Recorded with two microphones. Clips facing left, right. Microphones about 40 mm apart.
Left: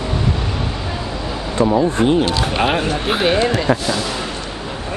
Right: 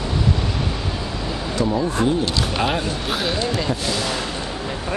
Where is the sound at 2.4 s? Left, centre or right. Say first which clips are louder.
Left 4 dB; left.